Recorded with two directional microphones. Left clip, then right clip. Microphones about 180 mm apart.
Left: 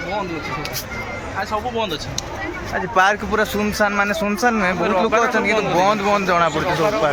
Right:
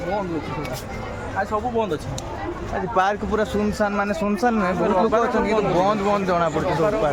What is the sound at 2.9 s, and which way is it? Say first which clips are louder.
Speech: left 4 dB; 5° left (ahead or behind).